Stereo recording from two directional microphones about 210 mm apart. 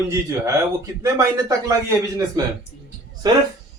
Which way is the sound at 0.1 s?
15° right (ahead or behind).